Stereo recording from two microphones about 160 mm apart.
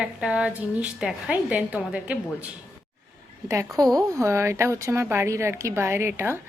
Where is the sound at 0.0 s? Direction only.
5° right (ahead or behind).